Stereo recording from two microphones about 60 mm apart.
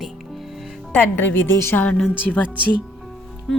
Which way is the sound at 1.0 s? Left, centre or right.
Left.